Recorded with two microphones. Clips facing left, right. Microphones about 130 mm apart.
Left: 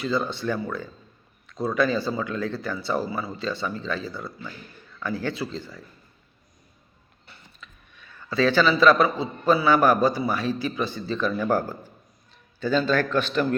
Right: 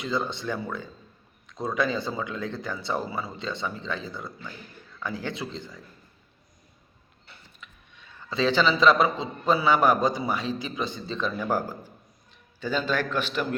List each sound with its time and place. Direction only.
0.0 s a man's voice: 20° right (ahead or behind)
7.6 s a sound: 20° right (ahead or behind)
8.8 s a man's voice: 20° right (ahead or behind)